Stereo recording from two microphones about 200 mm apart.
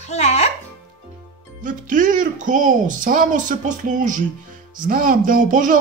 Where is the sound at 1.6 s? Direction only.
40° right (ahead or behind).